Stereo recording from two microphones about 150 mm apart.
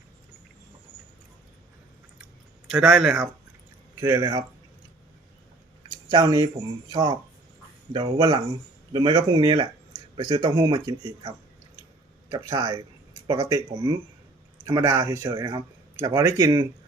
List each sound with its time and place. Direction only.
2.6 s speech: 5° right (ahead or behind)
3.9 s a man's voice: 20° right (ahead or behind)
6.1 s a man's voice: 25° right (ahead or behind)
14.8 s a man's voice: 20° right (ahead or behind)